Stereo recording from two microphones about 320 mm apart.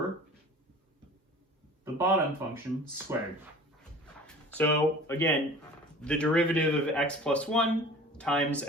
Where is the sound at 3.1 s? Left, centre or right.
Centre.